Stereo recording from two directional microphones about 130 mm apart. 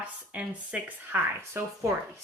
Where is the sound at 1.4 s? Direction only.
20° right (ahead or behind).